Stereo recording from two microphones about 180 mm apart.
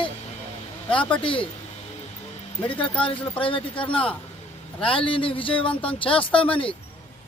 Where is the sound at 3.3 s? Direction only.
30° left (ahead or behind).